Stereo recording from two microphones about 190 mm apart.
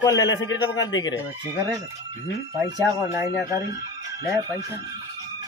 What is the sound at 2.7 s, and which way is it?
Speech, 15° right (ahead or behind).